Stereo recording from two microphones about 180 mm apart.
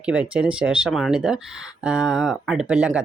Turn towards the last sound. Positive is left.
turn(degrees=-5)  # may be behind; listen again after turning